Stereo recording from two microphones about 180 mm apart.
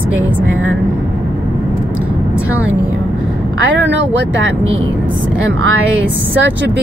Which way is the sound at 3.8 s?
90° right.